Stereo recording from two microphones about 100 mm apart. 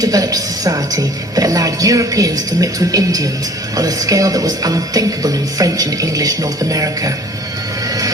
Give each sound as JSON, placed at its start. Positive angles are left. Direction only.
{"t": 0.0, "sound": "speech", "side_deg": -35}